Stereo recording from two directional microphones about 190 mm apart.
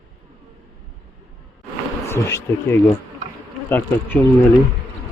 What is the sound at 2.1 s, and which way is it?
Speech, 15° left (ahead or behind).